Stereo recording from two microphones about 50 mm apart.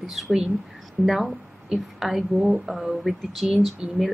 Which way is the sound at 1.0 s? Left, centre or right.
Right.